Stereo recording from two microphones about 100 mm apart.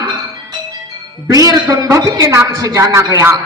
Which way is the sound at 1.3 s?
35° right (ahead or behind).